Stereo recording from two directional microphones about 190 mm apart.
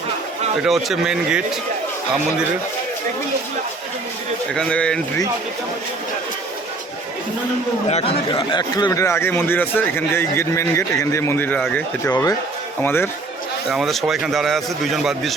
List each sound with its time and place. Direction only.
0.6 s a man's voice: centre (ahead or behind)
4.5 s a man's voice: 5° left (ahead or behind)
7.9 s speech: 35° left (ahead or behind)
8.3 s speech: 25° left (ahead or behind); by 12.1 s 5° left (ahead or behind)
12.1 s speech: 20° left (ahead or behind)
13.7 s a man's voice: centre (ahead or behind)